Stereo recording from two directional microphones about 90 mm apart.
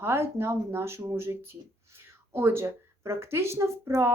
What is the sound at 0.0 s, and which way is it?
Speech, 30° right (ahead or behind).